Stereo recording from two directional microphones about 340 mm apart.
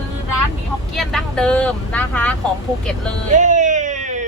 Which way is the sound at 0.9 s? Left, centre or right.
Centre.